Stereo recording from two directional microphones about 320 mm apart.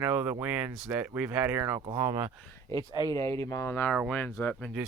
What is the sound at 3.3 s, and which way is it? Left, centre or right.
Speech, centre.